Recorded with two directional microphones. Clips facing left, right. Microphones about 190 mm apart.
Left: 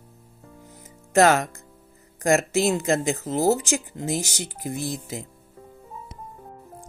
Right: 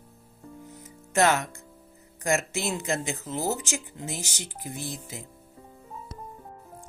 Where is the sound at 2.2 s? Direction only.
35° left (ahead or behind).